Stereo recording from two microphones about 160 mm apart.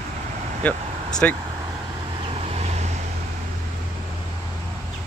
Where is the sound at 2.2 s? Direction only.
40° right (ahead or behind).